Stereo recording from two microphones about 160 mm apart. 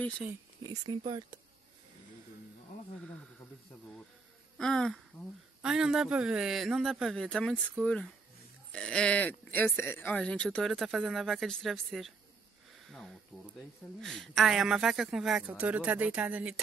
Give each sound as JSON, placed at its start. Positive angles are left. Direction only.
{"t": 0.7, "sound": "speech", "side_deg": -30}
{"t": 4.6, "sound": "speech", "side_deg": 5}